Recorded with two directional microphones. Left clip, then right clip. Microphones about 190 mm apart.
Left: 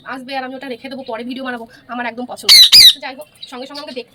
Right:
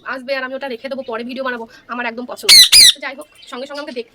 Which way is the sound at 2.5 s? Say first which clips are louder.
Left 1 dB; 5° right (ahead or behind).